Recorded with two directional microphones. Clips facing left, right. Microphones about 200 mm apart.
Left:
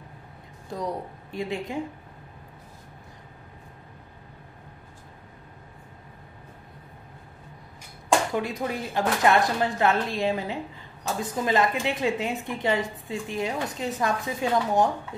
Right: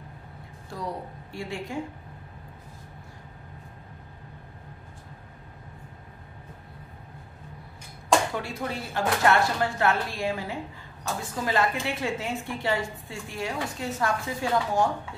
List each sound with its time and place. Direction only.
0.7 s a woman's voice: 20° left (ahead or behind)
8.4 s a woman's voice: 15° left (ahead or behind)